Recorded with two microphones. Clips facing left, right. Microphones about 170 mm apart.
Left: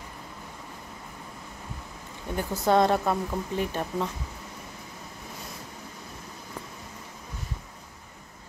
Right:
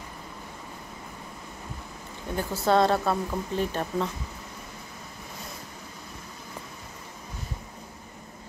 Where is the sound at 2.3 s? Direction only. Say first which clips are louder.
Even; 15° left (ahead or behind).